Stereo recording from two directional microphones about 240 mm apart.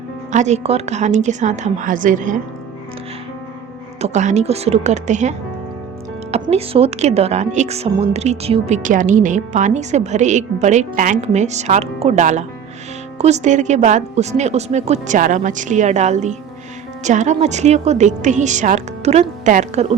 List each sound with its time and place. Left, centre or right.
0.3 s speech: right
4.0 s speech: right
6.3 s speech: right